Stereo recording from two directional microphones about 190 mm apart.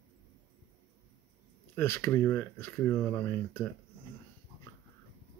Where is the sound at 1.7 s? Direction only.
15° left (ahead or behind).